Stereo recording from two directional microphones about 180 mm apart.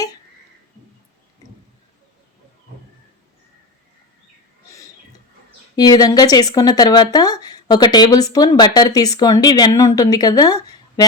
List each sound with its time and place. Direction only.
5.7 s speech: 20° left (ahead or behind)